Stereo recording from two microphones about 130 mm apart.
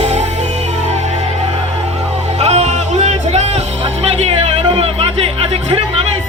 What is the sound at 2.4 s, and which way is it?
Music, 55° right (ahead or behind).